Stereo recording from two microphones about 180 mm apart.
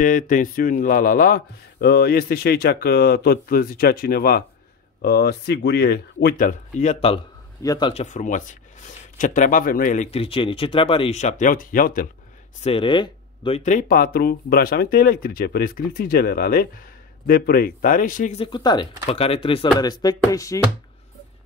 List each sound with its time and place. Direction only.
0.0 s speech: 45° left (ahead or behind)
7.6 s speech: 20° left (ahead or behind)
7.9 s speech: 40° left (ahead or behind)
10.1 s speech: 30° left (ahead or behind); by 12.1 s 50° left (ahead or behind)
12.6 s speech: 30° left (ahead or behind)
13.6 s speech: 45° left (ahead or behind)
18.4 s speech: 25° left (ahead or behind)